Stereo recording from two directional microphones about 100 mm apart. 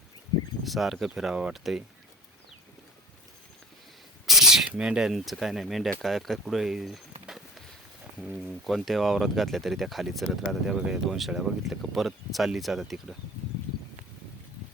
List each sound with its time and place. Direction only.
0.6 s speech: centre (ahead or behind)
4.3 s speech: 5° right (ahead or behind)
7.3 s a sound: 5° right (ahead or behind)
8.2 s speech: centre (ahead or behind)